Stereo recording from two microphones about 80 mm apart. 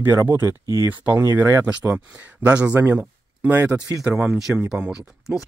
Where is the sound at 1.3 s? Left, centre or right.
Right.